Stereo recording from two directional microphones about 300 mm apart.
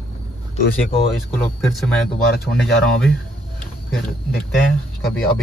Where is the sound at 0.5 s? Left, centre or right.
Centre.